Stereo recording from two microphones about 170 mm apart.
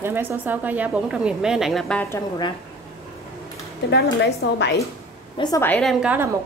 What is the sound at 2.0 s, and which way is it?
Speech, 20° left (ahead or behind).